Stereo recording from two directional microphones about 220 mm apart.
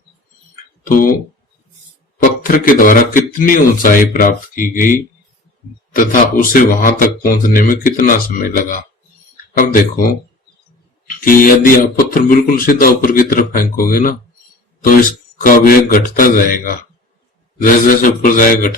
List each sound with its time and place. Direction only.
0.9 s speech: 40° left (ahead or behind)
2.4 s speech: 40° left (ahead or behind)
11.2 s speech: 40° left (ahead or behind)
15.4 s speech: 40° left (ahead or behind)